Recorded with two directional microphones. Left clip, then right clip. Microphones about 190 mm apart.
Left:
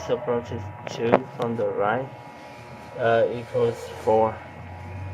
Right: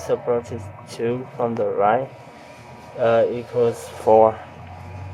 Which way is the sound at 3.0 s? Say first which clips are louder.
Right 3 dB; 60° right (ahead or behind).